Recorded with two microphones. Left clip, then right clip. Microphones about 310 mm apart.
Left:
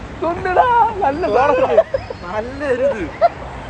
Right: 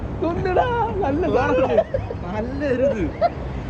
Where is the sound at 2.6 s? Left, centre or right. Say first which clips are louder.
Left 3 dB; centre.